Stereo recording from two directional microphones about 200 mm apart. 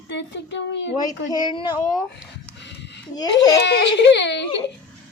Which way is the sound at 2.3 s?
60° left (ahead or behind).